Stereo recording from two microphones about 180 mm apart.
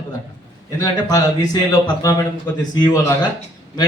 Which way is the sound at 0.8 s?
20° left (ahead or behind).